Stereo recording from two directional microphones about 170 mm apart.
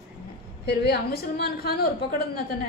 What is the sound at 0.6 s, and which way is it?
A woman's voice, 75° left (ahead or behind).